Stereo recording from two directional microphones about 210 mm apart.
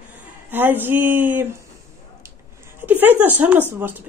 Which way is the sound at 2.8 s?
10° right (ahead or behind).